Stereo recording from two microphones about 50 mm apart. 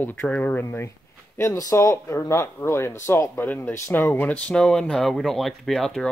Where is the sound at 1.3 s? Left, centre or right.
Left.